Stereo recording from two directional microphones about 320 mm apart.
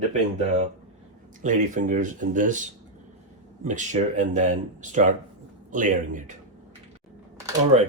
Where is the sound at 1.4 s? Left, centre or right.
Right.